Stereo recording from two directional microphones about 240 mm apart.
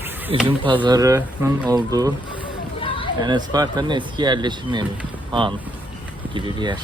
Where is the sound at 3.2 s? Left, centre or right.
Centre.